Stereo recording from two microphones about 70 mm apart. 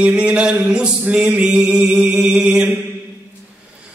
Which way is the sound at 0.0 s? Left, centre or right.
Centre.